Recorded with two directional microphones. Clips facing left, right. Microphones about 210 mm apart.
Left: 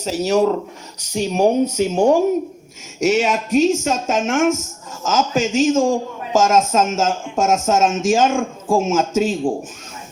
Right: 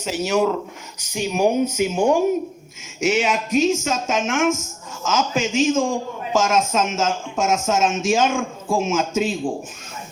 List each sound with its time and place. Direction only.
0.0 s speech: 35° left (ahead or behind)